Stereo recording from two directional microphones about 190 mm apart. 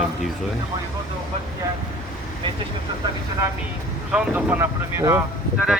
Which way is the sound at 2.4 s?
25° right (ahead or behind).